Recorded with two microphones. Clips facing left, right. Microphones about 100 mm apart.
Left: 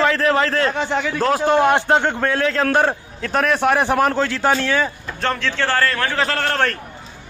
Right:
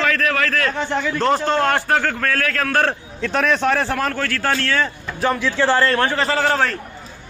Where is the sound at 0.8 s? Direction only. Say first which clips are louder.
Left 1 dB; 15° left (ahead or behind).